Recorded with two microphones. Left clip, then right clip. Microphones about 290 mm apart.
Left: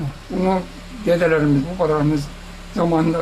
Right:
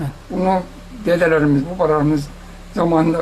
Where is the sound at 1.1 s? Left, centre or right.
Centre.